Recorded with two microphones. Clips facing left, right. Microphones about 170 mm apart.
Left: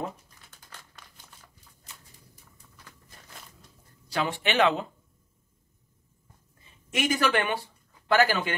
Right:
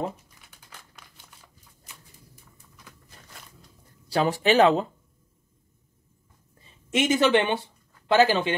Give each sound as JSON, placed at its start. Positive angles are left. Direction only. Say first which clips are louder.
{"t": 0.5, "sound": "crumpling", "louder": "even", "side_deg": -10}
{"t": 4.1, "sound": "speech", "louder": "right 7 dB", "side_deg": -35}
{"t": 6.9, "sound": "speech", "louder": "right 5 dB", "side_deg": -25}